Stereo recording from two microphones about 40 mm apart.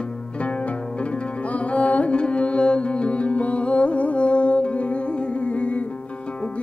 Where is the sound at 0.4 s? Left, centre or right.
Left.